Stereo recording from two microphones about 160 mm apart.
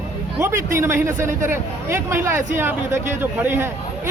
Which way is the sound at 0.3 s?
15° right (ahead or behind).